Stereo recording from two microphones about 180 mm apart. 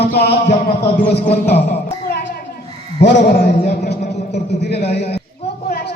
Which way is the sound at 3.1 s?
55° left (ahead or behind).